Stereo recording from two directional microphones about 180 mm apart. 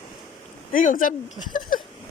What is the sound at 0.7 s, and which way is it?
Speech, 50° left (ahead or behind).